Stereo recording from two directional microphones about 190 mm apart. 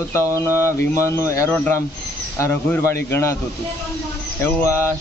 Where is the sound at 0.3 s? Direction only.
15° left (ahead or behind).